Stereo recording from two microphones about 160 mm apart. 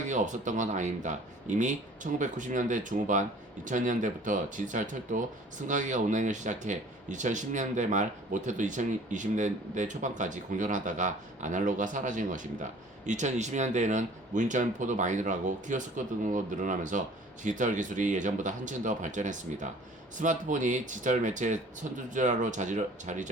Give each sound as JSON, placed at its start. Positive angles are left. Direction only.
{"t": 0.1, "sound": "speech", "side_deg": -50}